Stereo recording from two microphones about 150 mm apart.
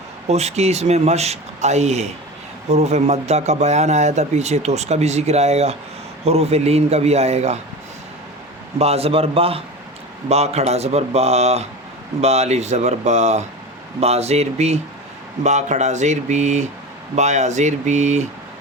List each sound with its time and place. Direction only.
0.3 s a man's voice: 45° right (ahead or behind)
8.8 s a man's voice: 40° right (ahead or behind)